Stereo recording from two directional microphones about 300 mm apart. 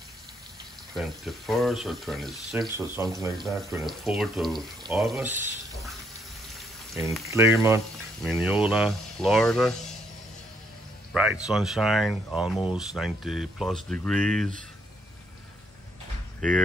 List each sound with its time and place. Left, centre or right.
0.9 s speech: centre
7.2 s speech: centre
11.4 s speech: centre
16.3 s speech: centre